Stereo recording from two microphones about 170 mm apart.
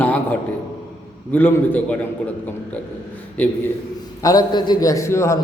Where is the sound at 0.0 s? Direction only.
10° left (ahead or behind).